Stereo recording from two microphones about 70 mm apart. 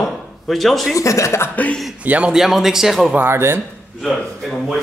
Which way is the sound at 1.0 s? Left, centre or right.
Left.